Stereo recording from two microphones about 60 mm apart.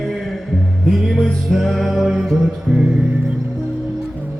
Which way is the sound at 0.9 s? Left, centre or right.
Centre.